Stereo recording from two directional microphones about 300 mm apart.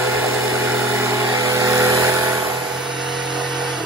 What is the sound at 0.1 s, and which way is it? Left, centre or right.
Vehicle, centre.